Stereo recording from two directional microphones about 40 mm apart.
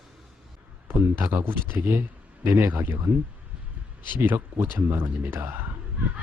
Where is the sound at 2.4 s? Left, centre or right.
Right.